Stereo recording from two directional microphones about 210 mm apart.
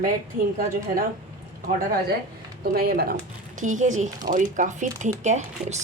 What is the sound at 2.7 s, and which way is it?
A woman's voice, 45° right (ahead or behind).